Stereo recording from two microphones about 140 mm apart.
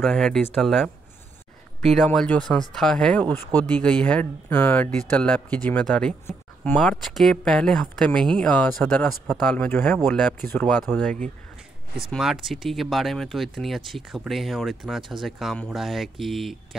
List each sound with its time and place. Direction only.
0.0 s speech: 5° left (ahead or behind)
12.0 s speech: centre (ahead or behind)